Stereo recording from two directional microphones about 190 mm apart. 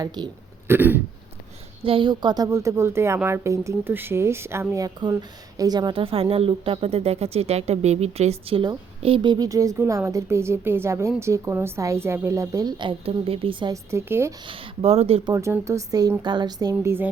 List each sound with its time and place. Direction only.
0.2 s speech: 20° right (ahead or behind)
0.7 s speech: 10° right (ahead or behind)
1.8 s speech: 25° right (ahead or behind)
13.9 s speech: 15° right (ahead or behind)
14.4 s speech: 30° right (ahead or behind)
15.3 s speech: 15° right (ahead or behind)
16.7 s speech: 10° right (ahead or behind)